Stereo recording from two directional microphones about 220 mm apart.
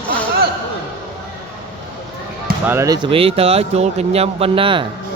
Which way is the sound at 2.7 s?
10° right (ahead or behind).